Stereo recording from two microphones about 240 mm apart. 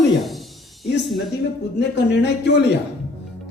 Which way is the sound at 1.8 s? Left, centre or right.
Left.